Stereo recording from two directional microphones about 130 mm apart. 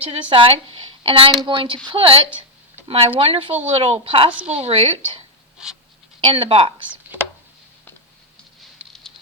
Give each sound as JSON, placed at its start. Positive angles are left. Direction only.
{"t": 0.0, "sound": "a woman's voice", "side_deg": -45}
{"t": 5.6, "sound": "dog", "side_deg": -5}
{"t": 6.2, "sound": "a woman's voice", "side_deg": -40}